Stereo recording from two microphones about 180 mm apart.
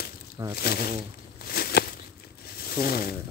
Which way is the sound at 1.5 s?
60° left (ahead or behind).